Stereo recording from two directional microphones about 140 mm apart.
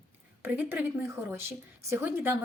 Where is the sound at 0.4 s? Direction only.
15° right (ahead or behind).